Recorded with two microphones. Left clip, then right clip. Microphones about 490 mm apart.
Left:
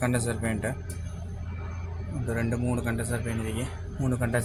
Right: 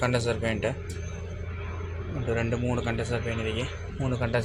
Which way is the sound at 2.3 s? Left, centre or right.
Left.